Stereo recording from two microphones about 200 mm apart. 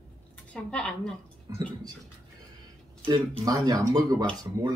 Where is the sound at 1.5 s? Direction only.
20° right (ahead or behind).